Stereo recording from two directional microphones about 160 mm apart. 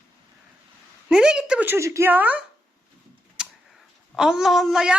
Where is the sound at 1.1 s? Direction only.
5° right (ahead or behind).